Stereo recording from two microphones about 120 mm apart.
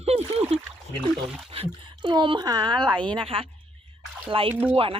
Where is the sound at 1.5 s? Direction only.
50° right (ahead or behind).